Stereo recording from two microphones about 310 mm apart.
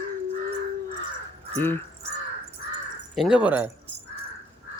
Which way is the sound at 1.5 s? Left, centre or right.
Centre.